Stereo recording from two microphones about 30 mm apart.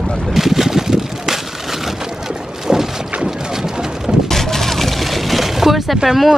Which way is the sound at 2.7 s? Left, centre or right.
Centre.